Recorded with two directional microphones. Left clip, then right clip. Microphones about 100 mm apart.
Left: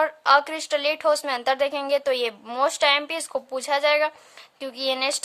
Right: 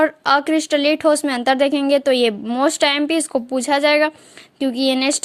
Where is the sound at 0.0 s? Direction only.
35° right (ahead or behind).